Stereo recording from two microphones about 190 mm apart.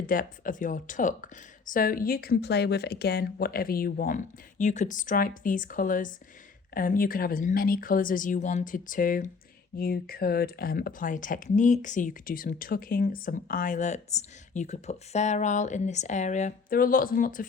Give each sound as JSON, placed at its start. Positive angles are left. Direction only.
{"t": 0.1, "sound": "speech", "side_deg": 45}